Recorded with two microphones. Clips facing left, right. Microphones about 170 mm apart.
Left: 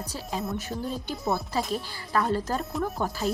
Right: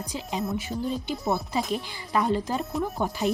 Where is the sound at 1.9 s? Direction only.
15° right (ahead or behind).